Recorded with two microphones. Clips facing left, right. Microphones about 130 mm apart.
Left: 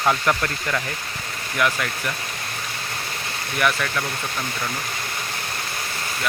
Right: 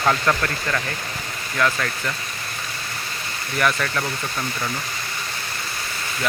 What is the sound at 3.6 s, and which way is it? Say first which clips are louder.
Speech: right 1 dB; 5° left (ahead or behind).